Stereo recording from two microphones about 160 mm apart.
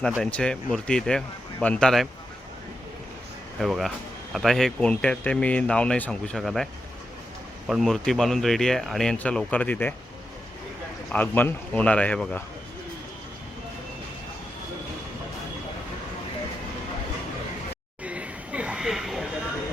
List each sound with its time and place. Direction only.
0.2 s speech: 5° left (ahead or behind)
3.6 s speech: centre (ahead or behind)
7.7 s speech: centre (ahead or behind)
11.1 s speech: 10° left (ahead or behind)
18.0 s a sound: 10° right (ahead or behind)